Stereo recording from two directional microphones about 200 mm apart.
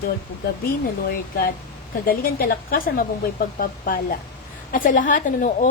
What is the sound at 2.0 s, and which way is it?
A woman's voice, 45° left (ahead or behind).